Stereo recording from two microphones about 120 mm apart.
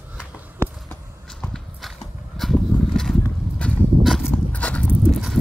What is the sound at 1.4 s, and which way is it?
Clip-clop, centre (ahead or behind).